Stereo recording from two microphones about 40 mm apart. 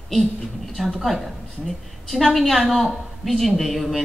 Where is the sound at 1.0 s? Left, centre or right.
Centre.